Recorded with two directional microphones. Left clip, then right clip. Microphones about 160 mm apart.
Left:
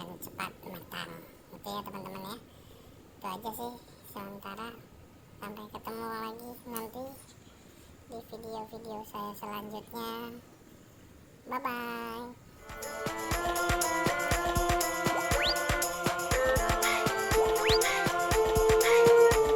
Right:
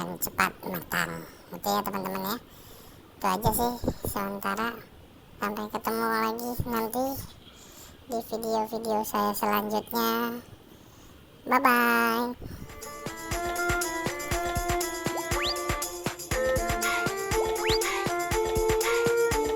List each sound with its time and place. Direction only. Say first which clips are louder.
0.3 s speech: right 14 dB; 30° right (ahead or behind)
0.7 s a sound: right 12 dB; 50° right (ahead or behind)
1.7 s speech: right 11 dB; 45° right (ahead or behind)
6.9 s speech: right 13 dB; 60° right (ahead or behind)
11.4 s speech: right 13 dB; 55° right (ahead or behind)
12.8 s music: left 3 dB; centre (ahead or behind)